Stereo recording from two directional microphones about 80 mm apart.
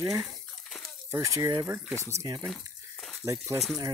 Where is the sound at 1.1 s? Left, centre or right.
Right.